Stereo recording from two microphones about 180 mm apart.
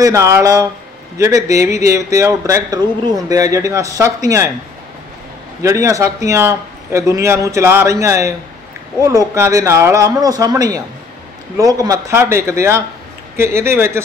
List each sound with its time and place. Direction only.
0.0 s speech: 15° right (ahead or behind)
5.6 s speech: 15° right (ahead or behind)